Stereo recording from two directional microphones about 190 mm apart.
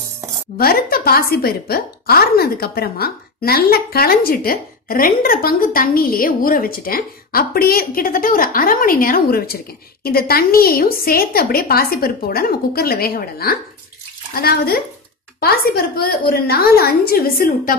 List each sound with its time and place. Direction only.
0.6 s a woman's voice: 50° left (ahead or behind)